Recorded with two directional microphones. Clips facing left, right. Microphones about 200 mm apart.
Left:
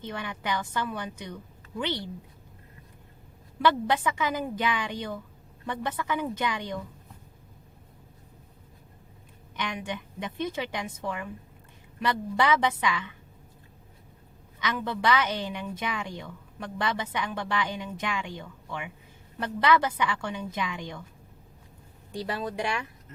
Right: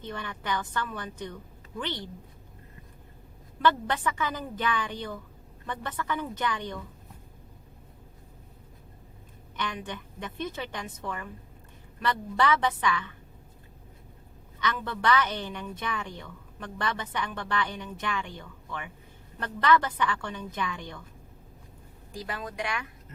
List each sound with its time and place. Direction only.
0.0 s a woman's voice: 15° left (ahead or behind)
3.6 s a woman's voice: 10° left (ahead or behind)
9.6 s a woman's voice: 15° left (ahead or behind)
14.6 s a woman's voice: 10° left (ahead or behind)
22.2 s speech: 30° left (ahead or behind)